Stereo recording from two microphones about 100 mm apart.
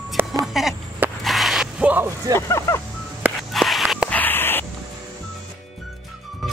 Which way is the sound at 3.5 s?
Centre (ahead or behind).